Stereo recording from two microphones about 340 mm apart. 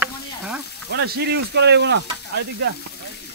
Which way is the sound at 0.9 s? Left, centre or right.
Right.